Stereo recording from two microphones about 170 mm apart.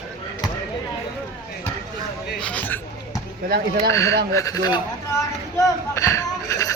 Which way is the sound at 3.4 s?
65° right (ahead or behind).